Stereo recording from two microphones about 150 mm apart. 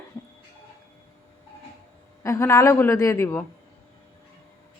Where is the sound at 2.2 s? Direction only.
20° left (ahead or behind).